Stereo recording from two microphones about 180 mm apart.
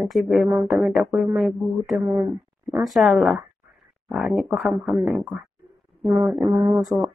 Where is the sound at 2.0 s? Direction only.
15° right (ahead or behind).